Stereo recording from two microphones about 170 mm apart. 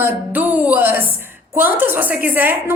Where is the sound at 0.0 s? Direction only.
10° right (ahead or behind).